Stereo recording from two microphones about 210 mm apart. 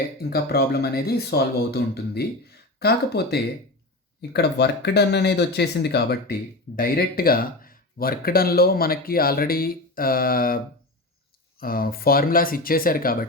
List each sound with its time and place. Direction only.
0.2 s speech: 45° left (ahead or behind)
11.6 s speech: 45° left (ahead or behind)